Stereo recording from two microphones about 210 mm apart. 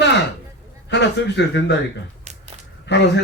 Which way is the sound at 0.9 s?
55° left (ahead or behind).